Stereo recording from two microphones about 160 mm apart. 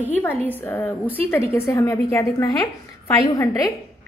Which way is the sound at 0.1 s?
10° left (ahead or behind).